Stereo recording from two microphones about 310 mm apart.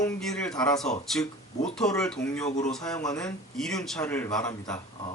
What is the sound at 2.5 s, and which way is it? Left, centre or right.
Speech, left.